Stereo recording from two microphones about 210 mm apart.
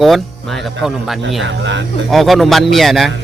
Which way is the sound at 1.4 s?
60° right (ahead or behind).